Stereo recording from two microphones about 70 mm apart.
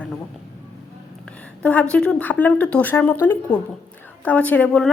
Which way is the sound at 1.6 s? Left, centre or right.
Centre.